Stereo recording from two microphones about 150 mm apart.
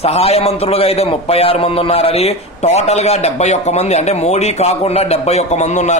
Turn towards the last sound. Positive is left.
turn(degrees=50)  # may be behind; listen again after turning